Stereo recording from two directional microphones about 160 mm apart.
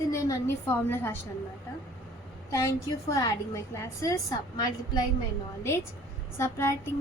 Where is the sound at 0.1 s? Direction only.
20° left (ahead or behind).